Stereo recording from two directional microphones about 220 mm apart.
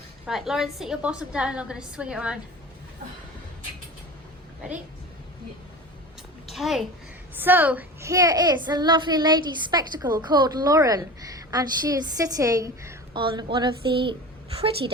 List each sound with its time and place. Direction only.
0.3 s a woman's voice: centre (ahead or behind)
6.5 s a child's voice: centre (ahead or behind); by 14.2 s 20° right (ahead or behind)